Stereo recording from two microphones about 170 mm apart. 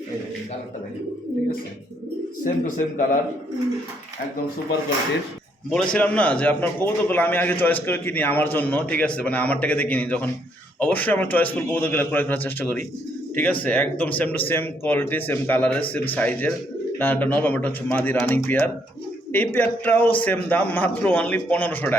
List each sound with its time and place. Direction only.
2.4 s a man's voice: 50° left (ahead or behind)
5.7 s speech: 5° left (ahead or behind)